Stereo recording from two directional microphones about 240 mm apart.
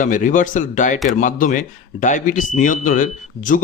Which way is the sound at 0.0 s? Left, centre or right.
Left.